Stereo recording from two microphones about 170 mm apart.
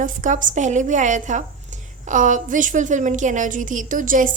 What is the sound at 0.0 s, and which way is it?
A woman's voice, 50° right (ahead or behind).